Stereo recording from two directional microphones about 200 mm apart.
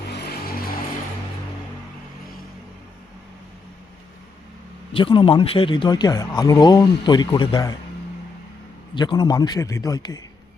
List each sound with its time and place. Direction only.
0.1 s music: 50° left (ahead or behind)
4.9 s speech: 25° left (ahead or behind)
9.0 s speech: 20° left (ahead or behind)